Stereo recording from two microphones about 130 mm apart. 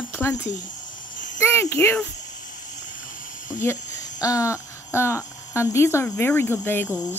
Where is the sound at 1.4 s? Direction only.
20° left (ahead or behind).